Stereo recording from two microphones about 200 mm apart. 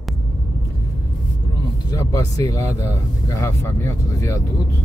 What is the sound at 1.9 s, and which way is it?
Speech, 15° left (ahead or behind).